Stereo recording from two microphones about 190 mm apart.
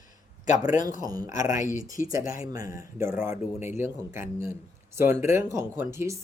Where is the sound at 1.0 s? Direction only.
20° right (ahead or behind).